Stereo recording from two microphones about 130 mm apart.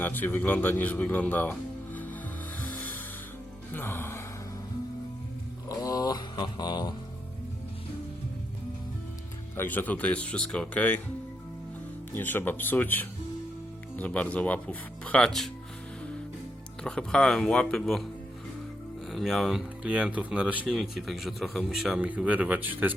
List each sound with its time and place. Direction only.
0.0 s speech: 15° left (ahead or behind)
2.6 s music: 15° left (ahead or behind)
3.7 s speech: 15° left (ahead or behind)
5.6 s mantra: 25° left (ahead or behind)
9.6 s speech: 15° left (ahead or behind)
12.1 s speech: 15° left (ahead or behind)
16.8 s speech: 5° left (ahead or behind)
19.1 s speech: centre (ahead or behind)